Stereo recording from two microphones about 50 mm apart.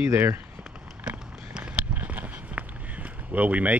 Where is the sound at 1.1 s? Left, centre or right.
Centre.